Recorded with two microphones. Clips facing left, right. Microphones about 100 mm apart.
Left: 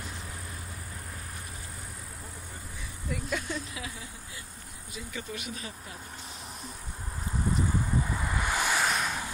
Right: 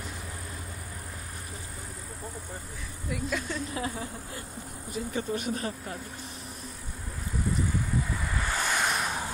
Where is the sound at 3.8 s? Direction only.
40° right (ahead or behind).